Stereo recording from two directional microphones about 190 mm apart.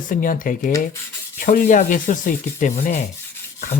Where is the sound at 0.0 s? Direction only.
45° left (ahead or behind).